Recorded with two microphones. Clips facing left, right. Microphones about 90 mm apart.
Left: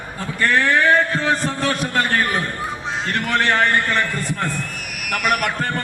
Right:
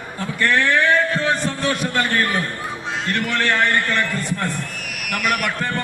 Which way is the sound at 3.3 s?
35° left (ahead or behind).